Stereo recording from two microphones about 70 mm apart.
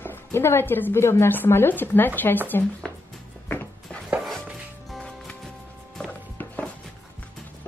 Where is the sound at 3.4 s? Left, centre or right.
Left.